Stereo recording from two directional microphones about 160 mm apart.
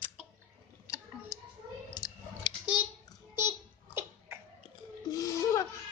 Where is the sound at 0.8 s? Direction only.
20° left (ahead or behind).